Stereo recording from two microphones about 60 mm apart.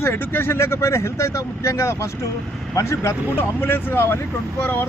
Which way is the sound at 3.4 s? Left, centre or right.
Left.